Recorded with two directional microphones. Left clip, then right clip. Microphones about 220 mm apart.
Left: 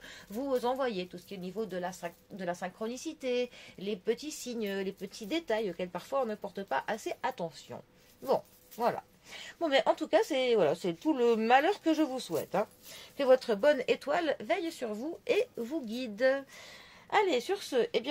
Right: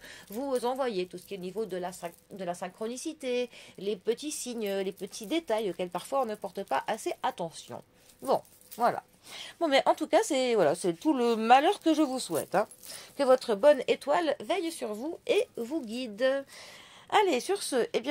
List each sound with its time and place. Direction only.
0.3 s speech: 30° right (ahead or behind)
13.2 s speech: 25° right (ahead or behind)